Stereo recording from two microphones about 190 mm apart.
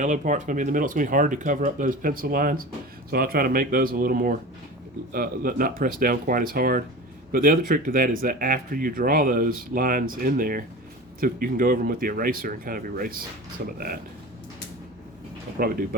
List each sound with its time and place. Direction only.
0.0 s speech: 40° right (ahead or behind)
15.5 s speech: 50° right (ahead or behind)